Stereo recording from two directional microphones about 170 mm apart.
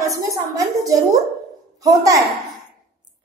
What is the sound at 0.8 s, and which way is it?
A child's voice, 20° right (ahead or behind).